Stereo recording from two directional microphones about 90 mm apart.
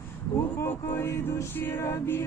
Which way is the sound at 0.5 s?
30° left (ahead or behind).